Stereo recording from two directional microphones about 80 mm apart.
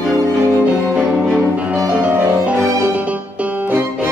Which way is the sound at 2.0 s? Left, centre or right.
Centre.